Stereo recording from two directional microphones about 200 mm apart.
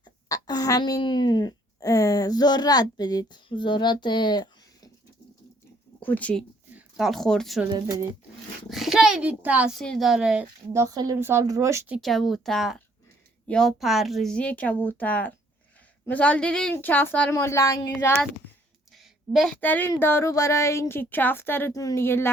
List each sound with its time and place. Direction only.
0.0 s speech: 20° left (ahead or behind)
6.0 s speech: 10° left (ahead or behind)
7.7 s speech: 20° right (ahead or behind)
8.7 s a woman's voice: centre (ahead or behind)
10.7 s speech: 15° right (ahead or behind)
11.9 s a woman's voice: centre (ahead or behind)
18.9 s a woman's voice: centre (ahead or behind)